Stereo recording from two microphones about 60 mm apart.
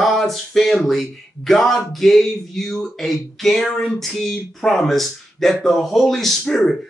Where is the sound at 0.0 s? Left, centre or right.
Centre.